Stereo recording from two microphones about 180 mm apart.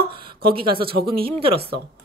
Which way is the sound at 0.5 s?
30° right (ahead or behind).